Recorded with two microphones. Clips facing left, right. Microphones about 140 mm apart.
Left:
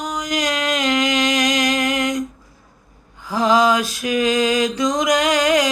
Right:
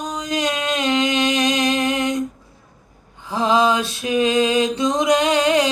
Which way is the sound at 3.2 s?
25° right (ahead or behind).